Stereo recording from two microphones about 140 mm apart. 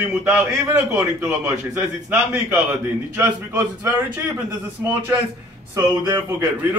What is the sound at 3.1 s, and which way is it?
Speech, 15° right (ahead or behind).